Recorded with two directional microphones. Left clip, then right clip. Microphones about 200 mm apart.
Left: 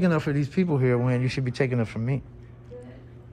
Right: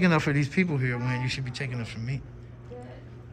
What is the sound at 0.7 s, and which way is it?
Speech, 20° left (ahead or behind).